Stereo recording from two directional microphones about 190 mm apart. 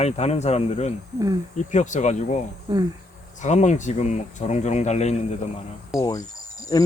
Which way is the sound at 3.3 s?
40° left (ahead or behind).